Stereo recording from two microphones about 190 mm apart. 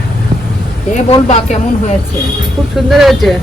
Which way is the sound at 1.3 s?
35° left (ahead or behind).